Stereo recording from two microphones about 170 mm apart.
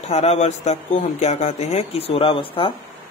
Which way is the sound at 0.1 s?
40° left (ahead or behind).